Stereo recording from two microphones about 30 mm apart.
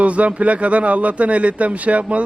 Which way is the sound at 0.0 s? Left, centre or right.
Right.